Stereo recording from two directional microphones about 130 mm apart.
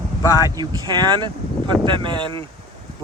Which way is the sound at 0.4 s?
30° right (ahead or behind).